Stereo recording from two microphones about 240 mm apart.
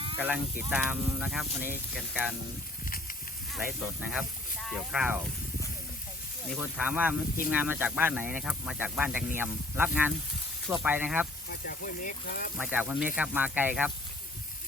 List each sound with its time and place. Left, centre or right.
0.2 s speech: centre
2.8 s a sound: left
3.5 s speech: centre
6.5 s speech: centre
11.6 s speech: left
12.5 s speech: centre